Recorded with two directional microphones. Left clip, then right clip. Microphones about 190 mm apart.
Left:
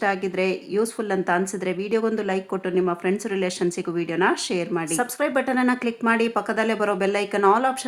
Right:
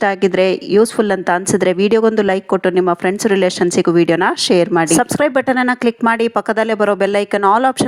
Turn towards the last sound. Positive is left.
turn(degrees=-45)  # may be behind; listen again after turning